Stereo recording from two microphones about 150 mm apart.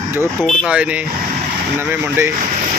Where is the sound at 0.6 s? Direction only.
10° right (ahead or behind).